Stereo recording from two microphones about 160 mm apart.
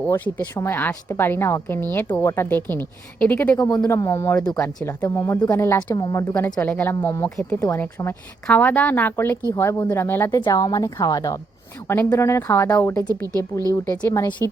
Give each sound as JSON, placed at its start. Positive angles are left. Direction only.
{"t": 0.0, "sound": "a woman's voice", "side_deg": 15}
{"t": 5.0, "sound": "a woman's voice", "side_deg": 20}
{"t": 7.3, "sound": "speech", "side_deg": 5}
{"t": 7.7, "sound": "a woman's voice", "side_deg": 15}
{"t": 13.2, "sound": "speech", "side_deg": -20}
{"t": 14.1, "sound": "a woman's voice", "side_deg": 15}